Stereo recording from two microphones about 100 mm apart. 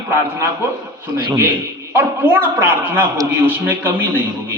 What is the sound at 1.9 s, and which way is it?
A man's voice, 20° right (ahead or behind).